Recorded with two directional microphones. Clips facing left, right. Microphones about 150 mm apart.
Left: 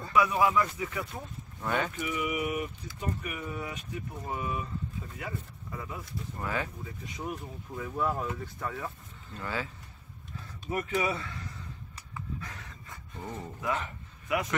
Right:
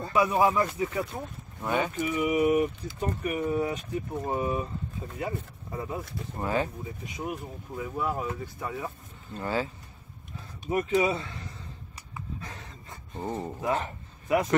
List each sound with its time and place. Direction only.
0.0 s speech: 30° right (ahead or behind)
1.6 s speech: 15° right (ahead or behind)
2.0 s speech: 30° right (ahead or behind)
7.2 s speech: 10° right (ahead or behind)
9.3 s speech: 30° right (ahead or behind)
10.7 s speech: 20° right (ahead or behind)
12.4 s a sound: 30° right (ahead or behind)